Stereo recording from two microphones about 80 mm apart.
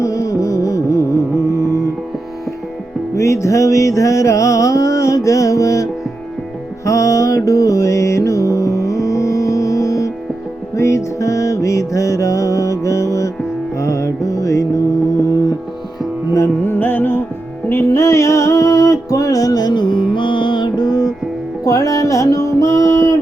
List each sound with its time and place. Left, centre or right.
0.0 s music: left
3.2 s music: left
16.3 s music: left
16.7 s music: left
21.6 s music: left